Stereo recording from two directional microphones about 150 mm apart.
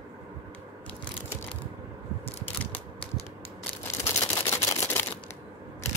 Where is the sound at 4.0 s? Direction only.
20° left (ahead or behind).